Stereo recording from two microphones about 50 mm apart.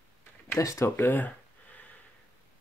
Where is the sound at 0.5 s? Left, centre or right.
Left.